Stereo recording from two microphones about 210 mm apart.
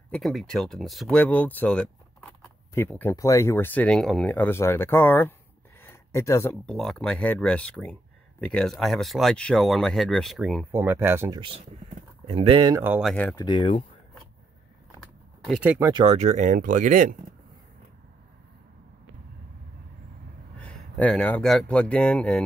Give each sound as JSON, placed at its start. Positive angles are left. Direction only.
{"t": 0.1, "sound": "speech", "side_deg": 0}
{"t": 5.8, "sound": "a sound", "side_deg": 15}
{"t": 6.6, "sound": "speech", "side_deg": 0}
{"t": 10.7, "sound": "speech", "side_deg": -10}
{"t": 12.3, "sound": "speech", "side_deg": -25}
{"t": 12.8, "sound": "speech", "side_deg": -10}
{"t": 13.1, "sound": "speech", "side_deg": 5}
{"t": 13.4, "sound": "speech", "side_deg": 25}
{"t": 15.4, "sound": "speech", "side_deg": -5}
{"t": 15.9, "sound": "speech", "side_deg": -20}
{"t": 16.2, "sound": "speech", "side_deg": -35}
{"t": 20.6, "sound": "speech", "side_deg": 5}